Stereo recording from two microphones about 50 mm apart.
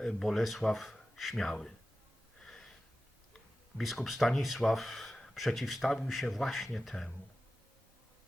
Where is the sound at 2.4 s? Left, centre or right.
Centre.